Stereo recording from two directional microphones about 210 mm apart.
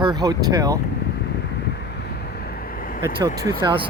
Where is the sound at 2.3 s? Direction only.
45° left (ahead or behind).